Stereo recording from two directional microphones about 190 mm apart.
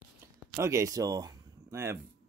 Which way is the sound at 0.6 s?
15° right (ahead or behind).